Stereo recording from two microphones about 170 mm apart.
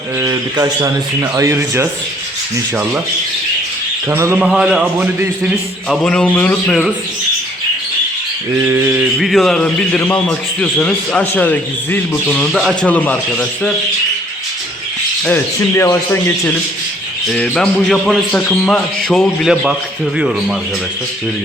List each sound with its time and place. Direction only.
0.2 s speech: 20° right (ahead or behind)
4.1 s speech: 15° right (ahead or behind)
4.4 s a man's voice: centre (ahead or behind)
5.9 s a man's voice: 5° left (ahead or behind)
8.6 s speech: 10° right (ahead or behind)
9.2 s a man's voice: centre (ahead or behind)
15.7 s a man's voice: 15° left (ahead or behind)
17.3 s a man's voice: 5° left (ahead or behind)